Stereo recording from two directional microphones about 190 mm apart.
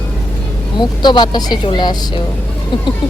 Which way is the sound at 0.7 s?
25° left (ahead or behind).